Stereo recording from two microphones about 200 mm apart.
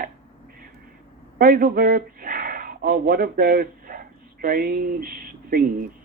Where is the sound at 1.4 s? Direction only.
50° right (ahead or behind).